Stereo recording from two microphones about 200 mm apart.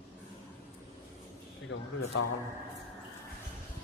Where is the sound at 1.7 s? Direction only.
65° left (ahead or behind).